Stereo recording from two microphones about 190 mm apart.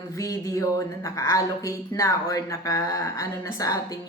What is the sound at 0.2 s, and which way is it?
A woman's voice, 15° left (ahead or behind).